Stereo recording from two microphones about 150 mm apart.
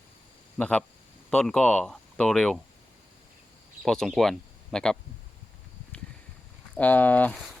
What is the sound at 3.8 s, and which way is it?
Speech, centre (ahead or behind).